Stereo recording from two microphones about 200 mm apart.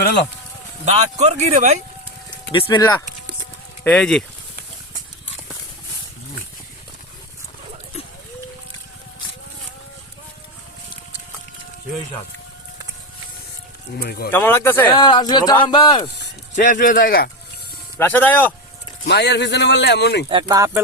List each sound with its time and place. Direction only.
0.9 s a man's voice: 35° right (ahead or behind)
2.5 s speech: 20° left (ahead or behind)
3.8 s speech: 5° left (ahead or behind)
14.0 s speech: 50° left (ahead or behind)
14.3 s speech: 10° left (ahead or behind)
14.8 s speech: 20° left (ahead or behind)
16.6 s speech: 40° left (ahead or behind)
17.9 s speech: 10° left (ahead or behind)
19.0 s a man's voice: 55° left (ahead or behind)
20.3 s speech: 15° right (ahead or behind)